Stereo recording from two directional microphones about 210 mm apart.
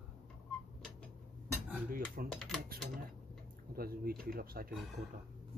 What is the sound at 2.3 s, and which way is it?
Speech, centre (ahead or behind).